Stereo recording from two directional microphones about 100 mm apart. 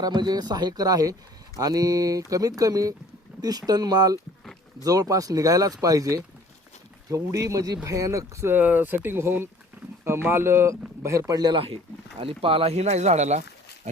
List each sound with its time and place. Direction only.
0.0 s speech: 45° right (ahead or behind)
11.5 s speech: 65° right (ahead or behind); by 13.1 s 90° right